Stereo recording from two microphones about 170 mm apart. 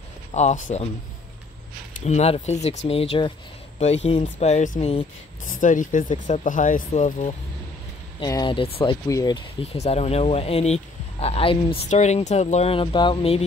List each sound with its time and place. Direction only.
0.3 s speech: 45° left (ahead or behind)
2.0 s speech: 40° left (ahead or behind)
8.2 s speech: 25° left (ahead or behind)